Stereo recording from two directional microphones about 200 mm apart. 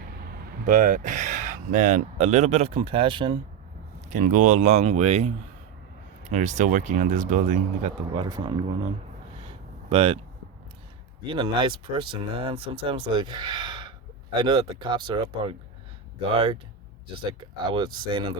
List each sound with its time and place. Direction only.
0.3 s speech: 40° right (ahead or behind); by 3.3 s 25° right (ahead or behind)
4.1 s speech: 40° right (ahead or behind)
8.1 s speech: 25° right (ahead or behind)
9.9 s speech: 30° right (ahead or behind)
11.3 s speech: 25° right (ahead or behind)
17.7 s speech: 25° right (ahead or behind)